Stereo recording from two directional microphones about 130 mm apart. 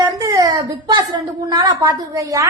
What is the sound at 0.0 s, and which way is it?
A woman's voice, 25° right (ahead or behind).